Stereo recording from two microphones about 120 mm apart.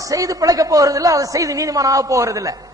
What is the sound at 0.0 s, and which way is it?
A man's voice, 30° right (ahead or behind).